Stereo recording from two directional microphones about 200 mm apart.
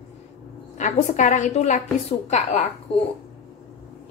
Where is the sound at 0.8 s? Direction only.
35° left (ahead or behind).